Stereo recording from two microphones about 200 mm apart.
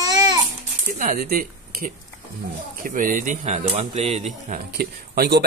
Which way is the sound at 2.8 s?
40° right (ahead or behind).